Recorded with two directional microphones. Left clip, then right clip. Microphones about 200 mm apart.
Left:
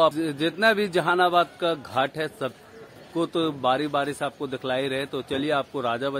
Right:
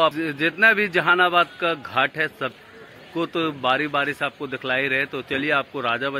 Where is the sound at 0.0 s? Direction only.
Centre (ahead or behind).